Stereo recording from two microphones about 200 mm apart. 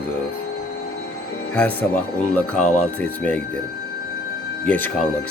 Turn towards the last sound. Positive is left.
turn(degrees=10)  # may be behind; listen again after turning